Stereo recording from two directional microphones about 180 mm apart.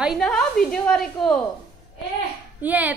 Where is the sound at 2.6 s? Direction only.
10° right (ahead or behind).